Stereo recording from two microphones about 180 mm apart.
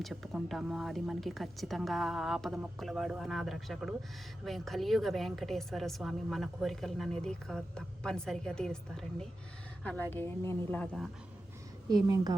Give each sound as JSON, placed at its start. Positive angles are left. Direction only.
{"t": 0.0, "sound": "a woman's voice", "side_deg": 0}
{"t": 11.9, "sound": "a woman's voice", "side_deg": -20}